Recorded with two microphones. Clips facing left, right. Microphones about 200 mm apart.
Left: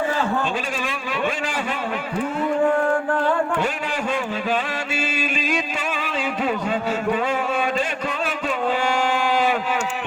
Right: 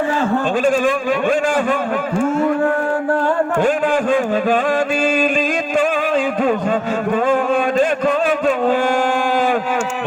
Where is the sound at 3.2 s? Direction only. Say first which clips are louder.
Right 5 dB; 50° right (ahead or behind).